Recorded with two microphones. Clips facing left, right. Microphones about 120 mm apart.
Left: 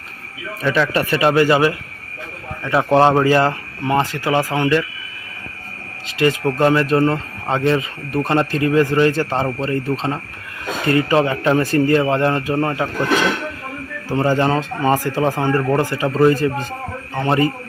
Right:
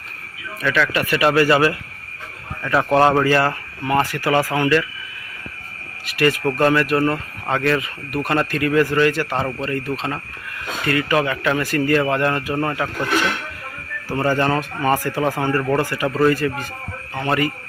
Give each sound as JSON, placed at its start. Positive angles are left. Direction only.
{"t": 0.6, "sound": "speech", "side_deg": 30}
{"t": 6.1, "sound": "speech", "side_deg": 20}
{"t": 14.1, "sound": "speech", "side_deg": 20}